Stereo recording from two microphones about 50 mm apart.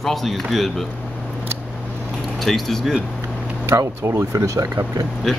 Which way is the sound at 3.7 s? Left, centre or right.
Right.